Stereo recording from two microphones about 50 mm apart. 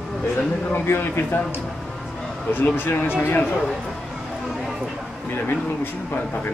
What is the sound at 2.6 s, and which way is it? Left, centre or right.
Speech, left.